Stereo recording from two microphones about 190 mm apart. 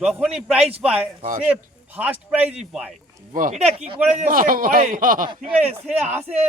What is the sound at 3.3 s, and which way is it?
Speech, 45° right (ahead or behind).